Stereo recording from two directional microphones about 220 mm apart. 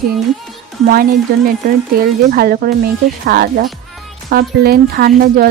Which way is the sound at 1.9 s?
45° right (ahead or behind).